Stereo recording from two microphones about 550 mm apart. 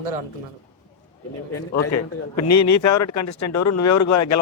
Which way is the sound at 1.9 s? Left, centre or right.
Left.